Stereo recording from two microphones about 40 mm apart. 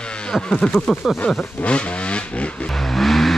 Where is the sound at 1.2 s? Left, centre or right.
Left.